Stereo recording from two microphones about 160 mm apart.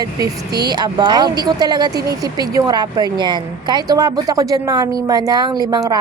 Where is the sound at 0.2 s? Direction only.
25° right (ahead or behind).